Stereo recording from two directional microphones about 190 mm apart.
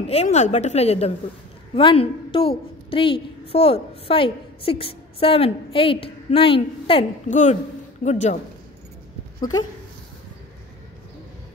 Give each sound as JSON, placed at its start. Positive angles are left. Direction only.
{"t": 0.0, "sound": "a woman's voice", "side_deg": 35}
{"t": 7.2, "sound": "a woman's voice", "side_deg": 40}
{"t": 9.4, "sound": "a woman's voice", "side_deg": 20}